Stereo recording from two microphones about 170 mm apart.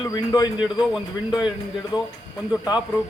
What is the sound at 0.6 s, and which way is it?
Speech, 5° right (ahead or behind).